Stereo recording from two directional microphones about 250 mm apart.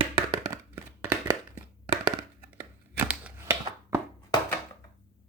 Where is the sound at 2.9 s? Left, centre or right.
Centre.